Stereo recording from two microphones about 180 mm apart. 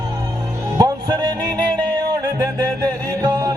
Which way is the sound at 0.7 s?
20° right (ahead or behind).